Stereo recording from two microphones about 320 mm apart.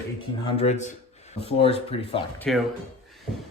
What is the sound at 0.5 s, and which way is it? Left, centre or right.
Speech, centre.